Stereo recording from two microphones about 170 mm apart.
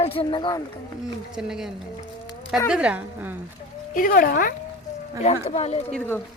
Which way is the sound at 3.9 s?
55° left (ahead or behind).